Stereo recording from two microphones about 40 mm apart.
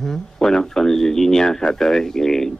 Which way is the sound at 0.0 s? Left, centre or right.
Centre.